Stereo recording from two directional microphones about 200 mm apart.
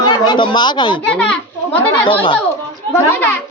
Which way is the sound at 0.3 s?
20° left (ahead or behind).